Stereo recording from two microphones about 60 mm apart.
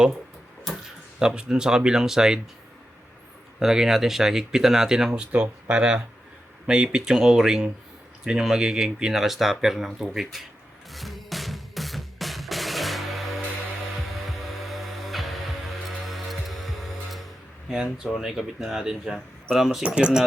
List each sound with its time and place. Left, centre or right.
0.7 s a sound: centre
1.2 s speech: centre
3.6 s speech: centre
10.9 s music: centre
17.9 s speech: centre
19.8 s speech: centre